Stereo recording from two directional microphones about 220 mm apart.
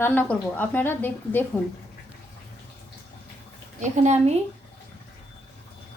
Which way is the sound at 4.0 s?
30° right (ahead or behind).